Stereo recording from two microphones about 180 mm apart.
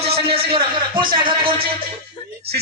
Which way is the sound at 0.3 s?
30° right (ahead or behind).